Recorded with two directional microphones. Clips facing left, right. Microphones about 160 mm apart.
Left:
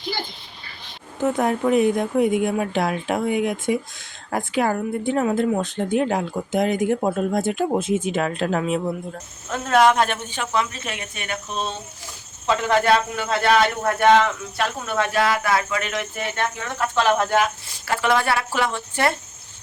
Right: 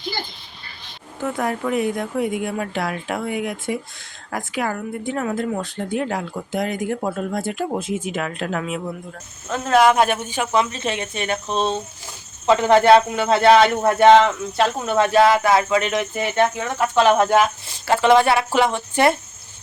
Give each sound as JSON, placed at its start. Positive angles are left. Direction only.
{"t": 1.2, "sound": "speech", "side_deg": 20}
{"t": 9.5, "sound": "a man's voice", "side_deg": 0}